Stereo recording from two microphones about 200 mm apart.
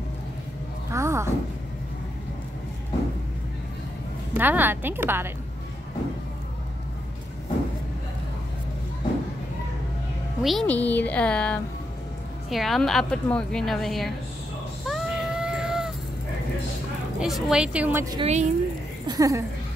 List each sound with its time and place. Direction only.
0.9 s a sound: 15° right (ahead or behind)
4.3 s a woman's voice: 10° right (ahead or behind)
10.4 s a woman's voice: centre (ahead or behind)
14.9 s a sound: centre (ahead or behind)
17.2 s a woman's voice: 5° right (ahead or behind)
18.2 s speech: 35° right (ahead or behind)
19.0 s speech: 15° right (ahead or behind)